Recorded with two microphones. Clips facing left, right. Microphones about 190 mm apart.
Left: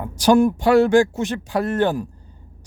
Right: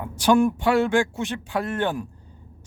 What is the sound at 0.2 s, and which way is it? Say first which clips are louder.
Speech: left 3 dB; 40° left (ahead or behind).